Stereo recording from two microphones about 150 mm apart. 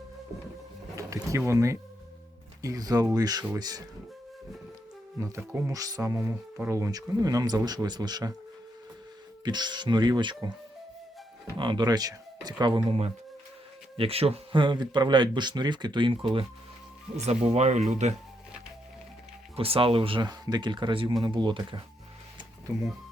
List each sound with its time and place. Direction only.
0.9 s speech: 20° right (ahead or behind)
5.2 s speech: 20° right (ahead or behind)
9.4 s speech: 30° right (ahead or behind)
11.5 s speech: 30° right (ahead or behind)
12.9 s speech: 40° right (ahead or behind)
19.5 s speech: 40° right (ahead or behind)